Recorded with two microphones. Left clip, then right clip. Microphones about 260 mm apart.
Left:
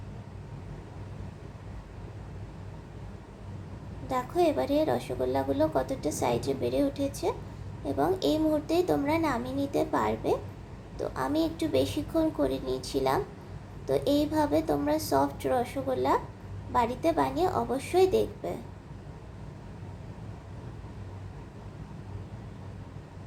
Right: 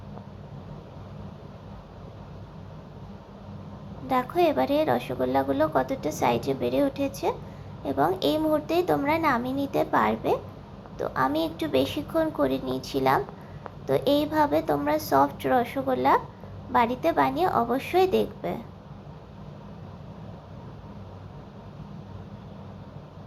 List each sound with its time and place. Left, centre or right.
4.1 s a woman's voice: centre